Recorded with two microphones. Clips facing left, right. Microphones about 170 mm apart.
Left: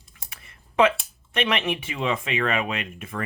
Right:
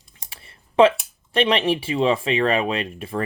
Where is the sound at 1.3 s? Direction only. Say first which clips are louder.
Right 6 dB; 35° right (ahead or behind).